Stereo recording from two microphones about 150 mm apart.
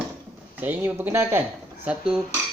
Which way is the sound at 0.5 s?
10° right (ahead or behind).